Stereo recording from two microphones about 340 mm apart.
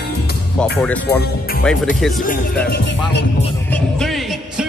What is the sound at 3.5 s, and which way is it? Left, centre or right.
Music, centre.